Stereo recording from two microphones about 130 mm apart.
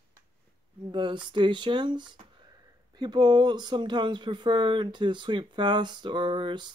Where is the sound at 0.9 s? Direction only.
40° right (ahead or behind).